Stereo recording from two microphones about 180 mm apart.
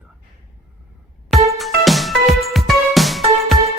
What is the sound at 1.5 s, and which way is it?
Music, centre (ahead or behind).